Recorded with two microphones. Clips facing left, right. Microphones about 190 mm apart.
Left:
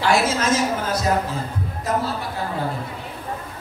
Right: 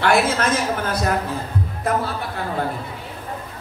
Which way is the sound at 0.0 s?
55° right (ahead or behind).